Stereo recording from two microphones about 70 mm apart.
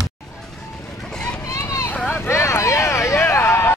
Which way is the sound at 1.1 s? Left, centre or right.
Centre.